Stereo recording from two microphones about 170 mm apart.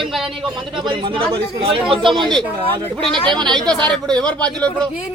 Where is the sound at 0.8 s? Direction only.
30° right (ahead or behind).